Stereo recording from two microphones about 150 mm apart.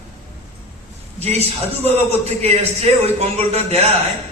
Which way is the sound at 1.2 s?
45° right (ahead or behind).